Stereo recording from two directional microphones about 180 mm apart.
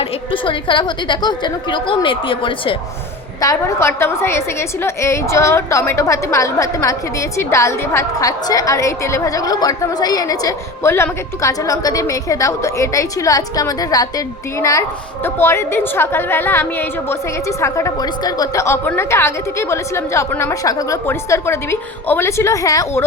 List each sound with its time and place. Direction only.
0.0 s a woman's voice: 30° left (ahead or behind)
3.4 s a woman's voice: 15° left (ahead or behind)